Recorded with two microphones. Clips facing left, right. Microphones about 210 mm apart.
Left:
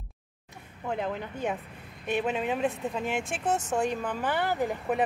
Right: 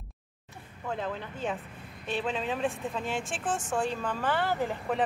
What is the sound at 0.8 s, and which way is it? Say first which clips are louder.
Speech: left 3 dB; 15° left (ahead or behind).